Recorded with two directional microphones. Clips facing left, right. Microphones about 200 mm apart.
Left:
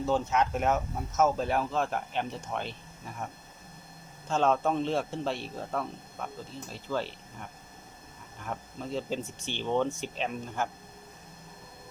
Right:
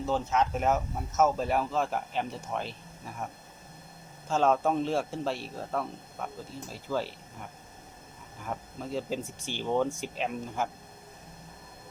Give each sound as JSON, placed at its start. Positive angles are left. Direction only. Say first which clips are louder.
{"t": 0.0, "sound": "a man's voice", "louder": "left 1 dB", "side_deg": 0}
{"t": 4.3, "sound": "a man's voice", "louder": "right 1 dB", "side_deg": -5}